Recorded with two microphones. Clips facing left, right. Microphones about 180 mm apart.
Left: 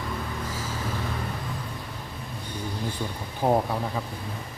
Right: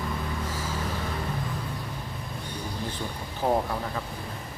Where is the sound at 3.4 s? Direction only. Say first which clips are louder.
Left 2 dB; 20° left (ahead or behind).